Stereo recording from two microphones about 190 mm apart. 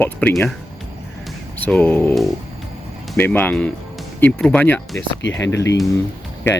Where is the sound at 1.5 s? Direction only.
10° left (ahead or behind).